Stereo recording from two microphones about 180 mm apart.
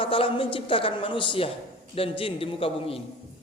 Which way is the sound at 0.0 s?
30° left (ahead or behind).